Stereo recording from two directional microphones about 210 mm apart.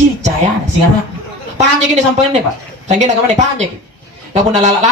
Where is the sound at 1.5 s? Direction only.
35° right (ahead or behind).